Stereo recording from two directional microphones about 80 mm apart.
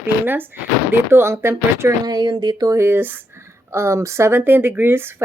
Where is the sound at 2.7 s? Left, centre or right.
Right.